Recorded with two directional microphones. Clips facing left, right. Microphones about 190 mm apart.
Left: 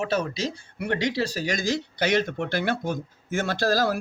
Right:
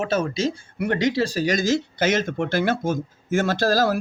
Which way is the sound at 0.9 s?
45° right (ahead or behind).